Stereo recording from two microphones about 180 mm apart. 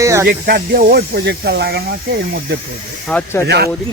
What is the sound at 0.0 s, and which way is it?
Speech, 15° right (ahead or behind).